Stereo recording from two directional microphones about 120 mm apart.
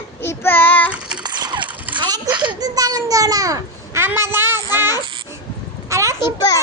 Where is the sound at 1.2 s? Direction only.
35° right (ahead or behind).